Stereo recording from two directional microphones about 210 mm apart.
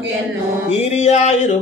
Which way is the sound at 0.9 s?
30° left (ahead or behind).